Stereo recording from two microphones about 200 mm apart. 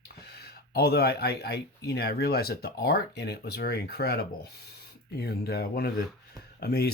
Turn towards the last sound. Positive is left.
turn(degrees=50)  # may be behind; listen again after turning